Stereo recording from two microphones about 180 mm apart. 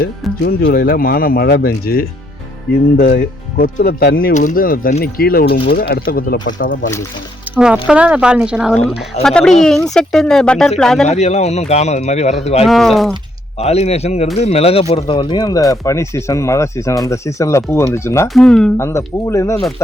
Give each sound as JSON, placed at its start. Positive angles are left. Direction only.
{"t": 0.0, "sound": "speech", "side_deg": 75}
{"t": 0.7, "sound": "speech", "side_deg": 50}
{"t": 7.5, "sound": "music", "side_deg": -10}
{"t": 7.9, "sound": "speech", "side_deg": -5}
{"t": 11.0, "sound": "speech", "side_deg": 40}
{"t": 12.6, "sound": "speech", "side_deg": 0}
{"t": 13.6, "sound": "speech", "side_deg": 35}
{"t": 18.3, "sound": "speech", "side_deg": 5}
{"t": 18.8, "sound": "speech", "side_deg": 15}